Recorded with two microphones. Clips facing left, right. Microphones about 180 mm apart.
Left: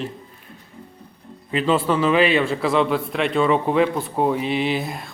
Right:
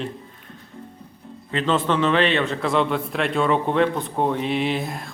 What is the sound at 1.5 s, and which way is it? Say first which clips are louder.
A man's voice: left 2 dB; 10° left (ahead or behind).